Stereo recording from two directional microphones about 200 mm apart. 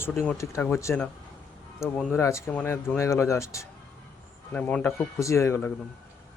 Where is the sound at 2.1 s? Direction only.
15° left (ahead or behind).